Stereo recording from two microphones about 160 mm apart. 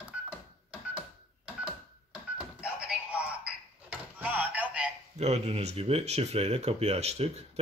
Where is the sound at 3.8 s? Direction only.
10° right (ahead or behind).